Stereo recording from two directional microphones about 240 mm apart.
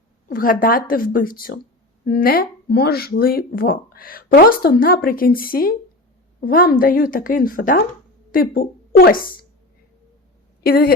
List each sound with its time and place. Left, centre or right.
0.3 s a woman's voice: left
10.6 s a woman's voice: left